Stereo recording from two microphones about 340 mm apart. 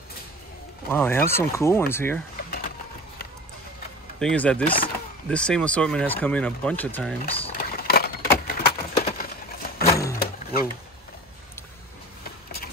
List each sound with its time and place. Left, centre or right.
0.8 s speech: centre
4.2 s speech: centre
4.6 s speech: centre
5.3 s speech: centre
7.4 s a sound: left
10.1 s vehicle: left